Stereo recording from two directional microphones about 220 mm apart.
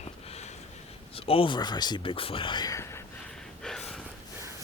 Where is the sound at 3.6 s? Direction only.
5° left (ahead or behind).